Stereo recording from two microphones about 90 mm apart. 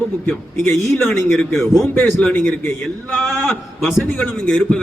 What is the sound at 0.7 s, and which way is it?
Speech, 30° left (ahead or behind).